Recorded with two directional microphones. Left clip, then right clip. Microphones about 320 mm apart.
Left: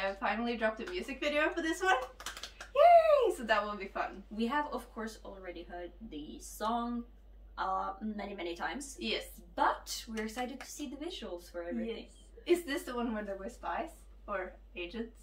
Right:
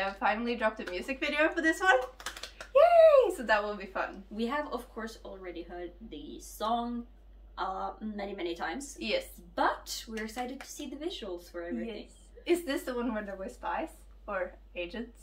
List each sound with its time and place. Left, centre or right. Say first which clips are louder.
0.2 s a woman's voice: right 7 dB; centre
14.7 s a woman's voice: right 4 dB; centre